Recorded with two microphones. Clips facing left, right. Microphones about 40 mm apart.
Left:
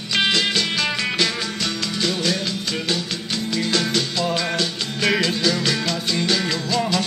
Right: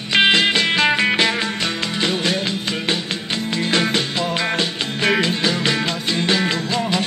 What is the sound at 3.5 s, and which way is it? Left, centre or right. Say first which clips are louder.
Music: right 2 dB; right.